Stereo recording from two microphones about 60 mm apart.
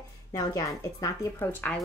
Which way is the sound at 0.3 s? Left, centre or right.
Left.